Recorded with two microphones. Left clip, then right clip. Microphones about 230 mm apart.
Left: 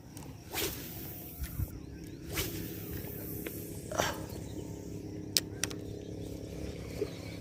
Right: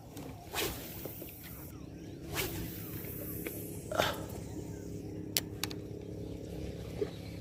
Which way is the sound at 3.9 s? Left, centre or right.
Centre.